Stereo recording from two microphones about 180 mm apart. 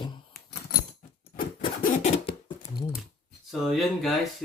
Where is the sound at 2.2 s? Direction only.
30° left (ahead or behind).